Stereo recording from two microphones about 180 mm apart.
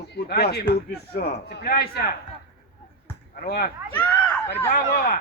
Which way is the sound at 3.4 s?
60° left (ahead or behind).